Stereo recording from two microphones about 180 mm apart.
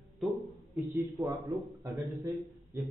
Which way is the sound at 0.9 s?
20° right (ahead or behind).